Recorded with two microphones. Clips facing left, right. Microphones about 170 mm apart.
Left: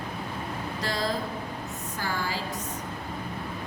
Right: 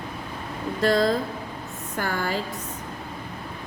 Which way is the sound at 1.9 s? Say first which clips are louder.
Right 5 dB; 60° right (ahead or behind).